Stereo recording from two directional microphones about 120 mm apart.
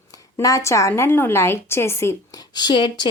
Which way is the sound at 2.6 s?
40° left (ahead or behind).